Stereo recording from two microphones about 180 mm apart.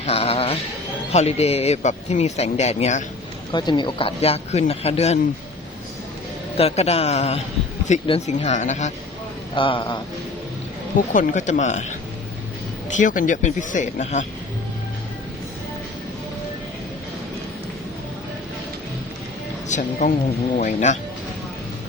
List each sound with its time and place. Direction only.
0.0 s speech: 35° left (ahead or behind)
3.5 s speech: 25° left (ahead or behind)
6.6 s speech: 35° left (ahead or behind)
9.6 s speech: 30° left (ahead or behind)
11.1 s speech: 45° left (ahead or behind)
13.0 s speech: 45° left (ahead or behind)
19.6 s speech: 40° left (ahead or behind)